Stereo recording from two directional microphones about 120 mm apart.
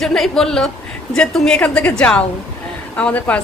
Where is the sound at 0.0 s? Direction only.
5° left (ahead or behind).